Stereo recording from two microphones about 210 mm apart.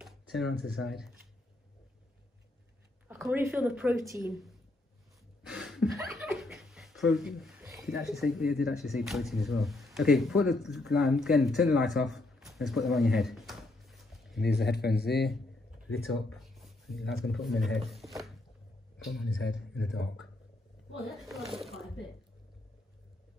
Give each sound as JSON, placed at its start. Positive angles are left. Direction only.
{"t": 0.0, "sound": "speech", "side_deg": 0}
{"t": 3.1, "sound": "speech", "side_deg": -5}
{"t": 5.5, "sound": "a sound", "side_deg": 0}
{"t": 6.0, "sound": "speech", "side_deg": 0}
{"t": 14.4, "sound": "a man's voice", "side_deg": 50}
{"t": 16.3, "sound": "a sound", "side_deg": 0}
{"t": 17.7, "sound": "speech", "side_deg": 0}
{"t": 19.8, "sound": "speech", "side_deg": 0}